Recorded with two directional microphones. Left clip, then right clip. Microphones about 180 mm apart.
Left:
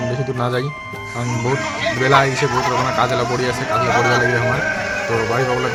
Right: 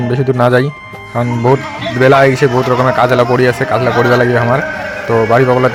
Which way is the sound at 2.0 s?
40° right (ahead or behind).